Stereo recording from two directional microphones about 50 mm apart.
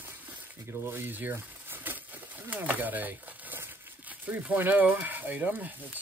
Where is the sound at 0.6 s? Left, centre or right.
Right.